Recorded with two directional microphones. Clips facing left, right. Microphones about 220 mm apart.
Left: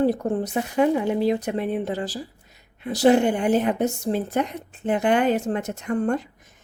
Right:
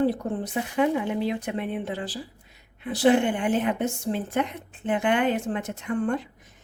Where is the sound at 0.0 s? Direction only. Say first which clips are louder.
Left 3 dB; 45° left (ahead or behind).